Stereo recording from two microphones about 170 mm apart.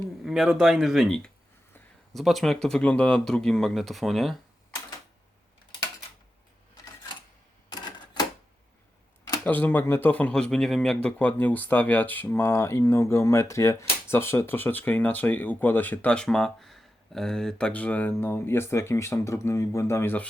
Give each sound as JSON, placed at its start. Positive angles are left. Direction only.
{"t": 0.2, "sound": "speech", "side_deg": 0}
{"t": 7.7, "sound": "camera", "side_deg": 25}
{"t": 9.4, "sound": "speech", "side_deg": 10}